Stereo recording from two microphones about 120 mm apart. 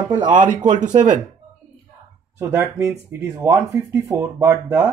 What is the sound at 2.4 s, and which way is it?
Speech, 20° right (ahead or behind).